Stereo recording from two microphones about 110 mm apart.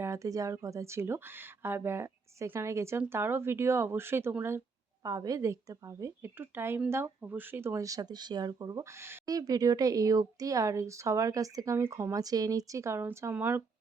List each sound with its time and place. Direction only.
0.0 s speech: 30° right (ahead or behind)
5.0 s speech: 30° right (ahead or behind)